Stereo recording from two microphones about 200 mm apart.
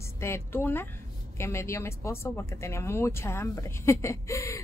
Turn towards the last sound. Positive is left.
turn(degrees=15)  # may be behind; listen again after turning